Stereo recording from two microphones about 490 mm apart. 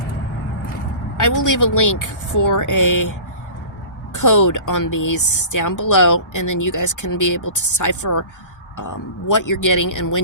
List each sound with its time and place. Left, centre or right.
1.1 s a woman's voice: left
9.3 s a woman's voice: left